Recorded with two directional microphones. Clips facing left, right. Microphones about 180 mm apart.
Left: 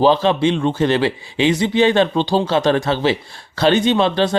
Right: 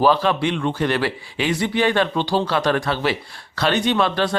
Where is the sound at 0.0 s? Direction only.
25° left (ahead or behind).